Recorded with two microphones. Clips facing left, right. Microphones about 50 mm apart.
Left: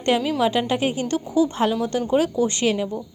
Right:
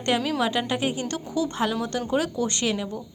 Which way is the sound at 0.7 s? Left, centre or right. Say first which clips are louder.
Left 4 dB; left.